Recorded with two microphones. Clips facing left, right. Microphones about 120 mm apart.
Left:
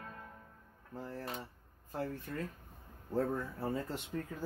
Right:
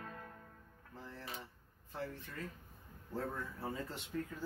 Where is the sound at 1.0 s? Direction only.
45° left (ahead or behind).